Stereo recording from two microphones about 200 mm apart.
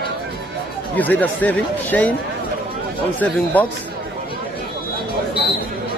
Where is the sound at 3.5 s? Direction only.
10° left (ahead or behind).